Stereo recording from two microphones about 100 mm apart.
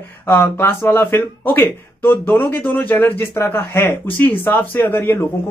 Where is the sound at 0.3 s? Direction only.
25° left (ahead or behind).